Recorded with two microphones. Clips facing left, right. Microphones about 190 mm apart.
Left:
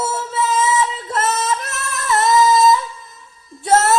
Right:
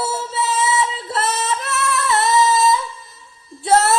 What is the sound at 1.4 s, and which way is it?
Singing, 40° left (ahead or behind).